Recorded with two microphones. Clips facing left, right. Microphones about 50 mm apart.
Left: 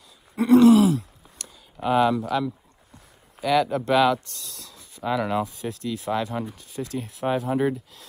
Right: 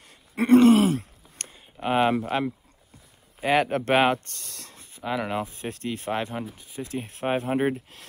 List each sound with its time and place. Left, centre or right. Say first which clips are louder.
0.4 s groan: left 2 dB; right
1.8 s speech: left 2 dB; right
5.0 s speech: left 3 dB; centre
5.5 s speech: left 2 dB; right
6.5 s speech: left 2 dB; centre
7.1 s speech: left 1 dB; right